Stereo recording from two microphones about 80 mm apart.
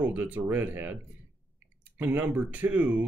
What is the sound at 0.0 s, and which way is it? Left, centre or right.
Speech, right.